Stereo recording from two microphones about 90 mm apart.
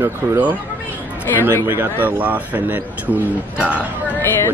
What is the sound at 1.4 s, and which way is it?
Speech, 25° right (ahead or behind).